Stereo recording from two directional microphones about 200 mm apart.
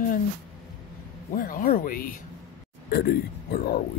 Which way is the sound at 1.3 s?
45° left (ahead or behind).